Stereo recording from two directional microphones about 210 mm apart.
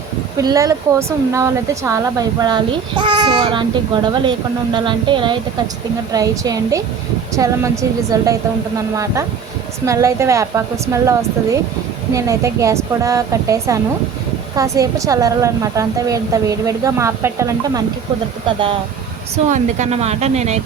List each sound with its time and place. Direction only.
0.3 s a woman's voice: 15° right (ahead or behind)
9.8 s a woman's voice: 15° right (ahead or behind)
18.4 s speech: 25° right (ahead or behind)